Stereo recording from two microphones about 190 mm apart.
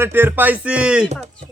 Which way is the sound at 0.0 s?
10° right (ahead or behind).